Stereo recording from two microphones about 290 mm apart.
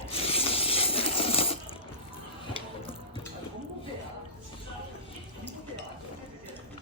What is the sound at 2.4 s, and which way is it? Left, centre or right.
Music, centre.